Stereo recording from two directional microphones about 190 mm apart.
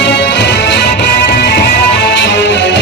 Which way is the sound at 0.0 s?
65° left (ahead or behind).